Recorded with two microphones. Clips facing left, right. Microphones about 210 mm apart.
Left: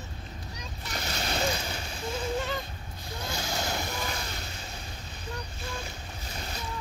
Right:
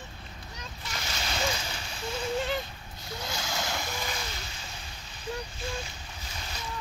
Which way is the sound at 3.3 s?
35° left (ahead or behind).